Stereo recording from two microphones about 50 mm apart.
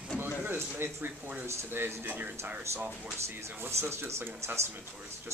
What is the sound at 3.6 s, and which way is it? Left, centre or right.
Speech, right.